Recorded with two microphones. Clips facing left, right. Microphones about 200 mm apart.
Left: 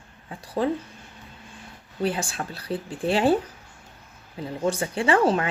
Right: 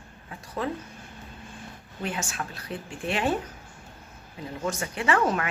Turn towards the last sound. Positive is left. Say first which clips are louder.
# left 4 dB
turn(degrees=30)  # may be behind; listen again after turning